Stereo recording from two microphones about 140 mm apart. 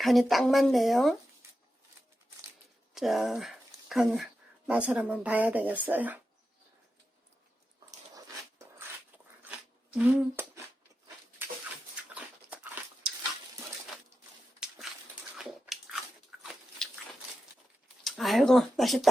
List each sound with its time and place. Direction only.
0.0 s speech: centre (ahead or behind)
2.9 s speech: centre (ahead or behind)
9.4 s a sound: 10° right (ahead or behind)
11.4 s a sound: 15° right (ahead or behind)
12.0 s dog: 10° right (ahead or behind)
15.4 s biting: 5° right (ahead or behind)
18.0 s speech: centre (ahead or behind)